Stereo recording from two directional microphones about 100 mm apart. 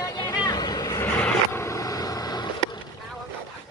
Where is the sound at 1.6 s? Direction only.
35° left (ahead or behind).